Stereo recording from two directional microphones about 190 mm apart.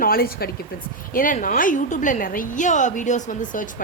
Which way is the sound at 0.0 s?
50° left (ahead or behind).